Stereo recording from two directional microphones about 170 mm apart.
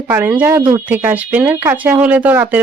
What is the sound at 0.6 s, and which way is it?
Speech, 25° right (ahead or behind).